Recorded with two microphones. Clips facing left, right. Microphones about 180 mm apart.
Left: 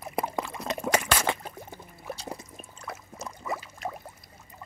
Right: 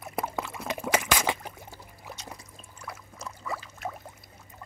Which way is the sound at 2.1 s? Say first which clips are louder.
Left 6 dB; 30° left (ahead or behind).